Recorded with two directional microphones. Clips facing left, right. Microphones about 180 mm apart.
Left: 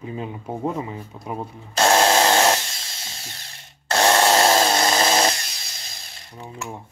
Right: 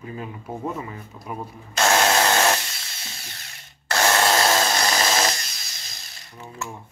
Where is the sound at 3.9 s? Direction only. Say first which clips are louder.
Left 3 dB; 25° left (ahead or behind).